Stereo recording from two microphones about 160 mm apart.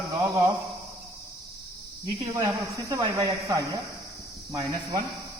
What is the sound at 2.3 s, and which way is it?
Speech, 20° right (ahead or behind).